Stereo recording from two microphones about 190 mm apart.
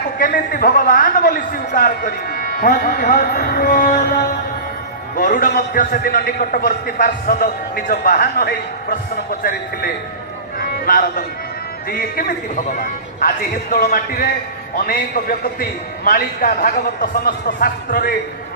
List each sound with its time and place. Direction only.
0.2 s a man's voice: 45° left (ahead or behind)
10.6 s music: 50° left (ahead or behind)
11.9 s a man's voice: 50° left (ahead or behind)